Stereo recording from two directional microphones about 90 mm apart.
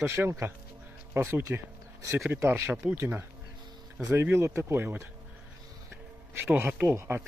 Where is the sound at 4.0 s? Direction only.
35° right (ahead or behind).